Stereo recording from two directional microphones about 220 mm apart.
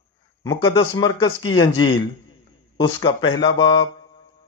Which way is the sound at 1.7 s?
70° left (ahead or behind).